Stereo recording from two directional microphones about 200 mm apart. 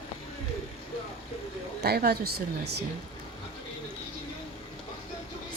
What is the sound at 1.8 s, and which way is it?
Speech, 50° right (ahead or behind).